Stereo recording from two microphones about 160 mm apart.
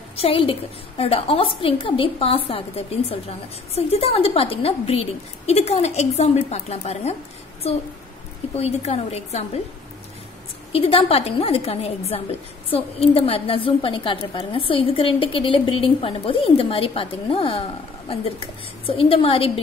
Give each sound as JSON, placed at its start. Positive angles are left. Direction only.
{"t": 0.2, "sound": "a woman's voice", "side_deg": 35}
{"t": 8.5, "sound": "a woman's voice", "side_deg": 40}
{"t": 10.7, "sound": "a woman's voice", "side_deg": 35}